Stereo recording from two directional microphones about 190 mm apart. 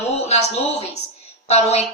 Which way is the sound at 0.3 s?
35° left (ahead or behind).